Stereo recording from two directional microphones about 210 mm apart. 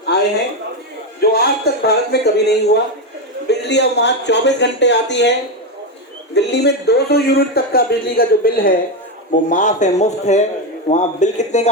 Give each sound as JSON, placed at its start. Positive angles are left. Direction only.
{"t": 0.1, "sound": "a sound", "side_deg": 50}
{"t": 1.2, "sound": "a man's voice", "side_deg": 50}
{"t": 6.3, "sound": "a man's voice", "side_deg": 55}